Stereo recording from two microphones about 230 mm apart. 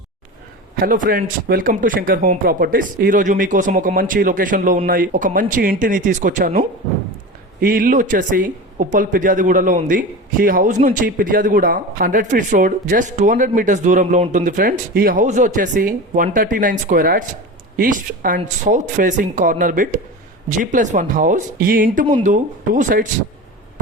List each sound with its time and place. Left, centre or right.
0.8 s speech: right